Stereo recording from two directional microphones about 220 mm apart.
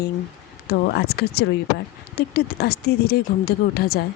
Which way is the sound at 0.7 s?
50° left (ahead or behind).